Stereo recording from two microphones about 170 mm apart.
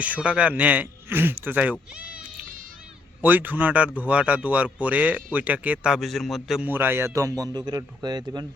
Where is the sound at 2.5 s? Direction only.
55° right (ahead or behind).